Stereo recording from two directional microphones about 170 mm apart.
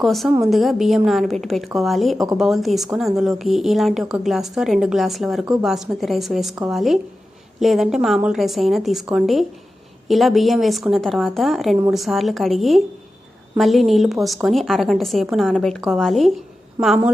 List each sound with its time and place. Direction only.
0.0 s a woman's voice: centre (ahead or behind)
2.1 s speech: 20° right (ahead or behind)
2.4 s a woman's voice: centre (ahead or behind)